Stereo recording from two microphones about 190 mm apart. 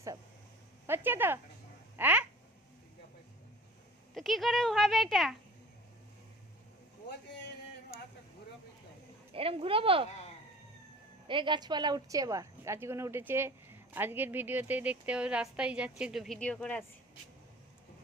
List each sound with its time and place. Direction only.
0.9 s a woman's voice: 10° right (ahead or behind)
4.1 s speech: centre (ahead or behind)
9.3 s speech: 30° right (ahead or behind)
11.3 s a woman's voice: 25° right (ahead or behind); by 16.8 s 5° left (ahead or behind)